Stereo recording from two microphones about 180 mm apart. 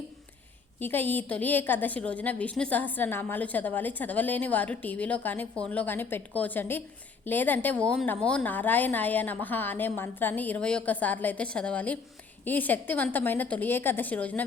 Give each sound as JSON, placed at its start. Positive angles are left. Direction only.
{"t": 0.8, "sound": "a woman's voice", "side_deg": 10}